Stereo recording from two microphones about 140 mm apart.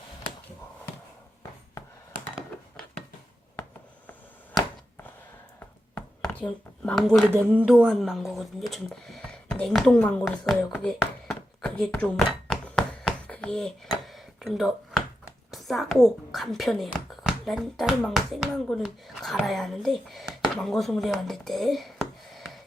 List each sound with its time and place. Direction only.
3.5 s writing: 15° left (ahead or behind)
5.5 s chopping: 15° left (ahead or behind)
6.8 s a child's voice: centre (ahead or behind)
7.3 s a child's voice: 10° right (ahead or behind)
11.3 s a sound: 5° left (ahead or behind)
15.5 s a child's voice: centre (ahead or behind)